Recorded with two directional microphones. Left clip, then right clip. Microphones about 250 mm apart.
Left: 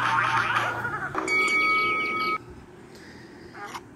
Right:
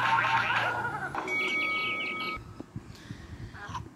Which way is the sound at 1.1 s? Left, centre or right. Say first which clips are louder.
Left 9 dB; centre.